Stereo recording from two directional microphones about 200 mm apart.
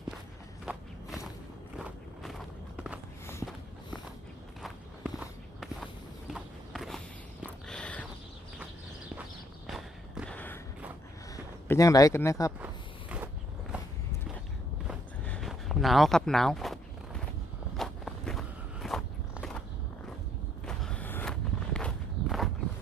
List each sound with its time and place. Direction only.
0.6 s walk: 5° right (ahead or behind)
2.7 s walk: 5° right (ahead or behind)
3.4 s walk: 5° left (ahead or behind)
4.6 s walk: 5° right (ahead or behind)
7.4 s a sound: 5° left (ahead or behind)
9.6 s walk: centre (ahead or behind)
11.7 s speech: 15° left (ahead or behind)
12.5 s walk: 5° right (ahead or behind)
15.3 s a sound: centre (ahead or behind)
17.7 s walk: centre (ahead or behind)
20.7 s walk: 5° left (ahead or behind)